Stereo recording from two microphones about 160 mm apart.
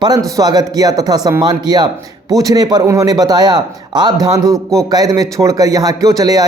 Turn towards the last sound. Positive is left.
turn(degrees=-25)  # may be behind; listen again after turning